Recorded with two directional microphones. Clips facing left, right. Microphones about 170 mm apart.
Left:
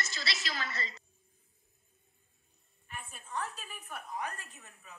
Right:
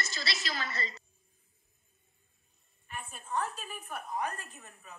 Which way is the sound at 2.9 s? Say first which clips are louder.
Right 4 dB; 45° right (ahead or behind).